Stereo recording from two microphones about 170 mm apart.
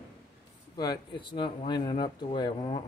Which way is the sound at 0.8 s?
25° left (ahead or behind).